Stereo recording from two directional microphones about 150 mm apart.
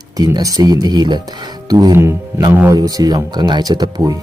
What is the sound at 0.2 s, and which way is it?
Speech, 25° right (ahead or behind).